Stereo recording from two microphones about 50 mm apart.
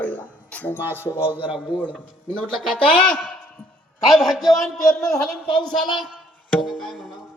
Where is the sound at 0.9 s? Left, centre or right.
Left.